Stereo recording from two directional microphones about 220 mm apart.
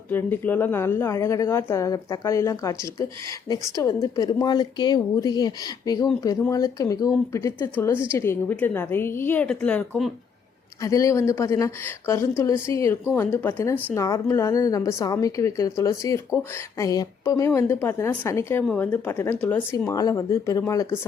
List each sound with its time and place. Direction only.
0.1 s a woman's voice: 10° left (ahead or behind)